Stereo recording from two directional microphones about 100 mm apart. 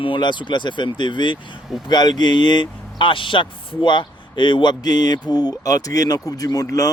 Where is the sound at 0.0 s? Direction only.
55° left (ahead or behind).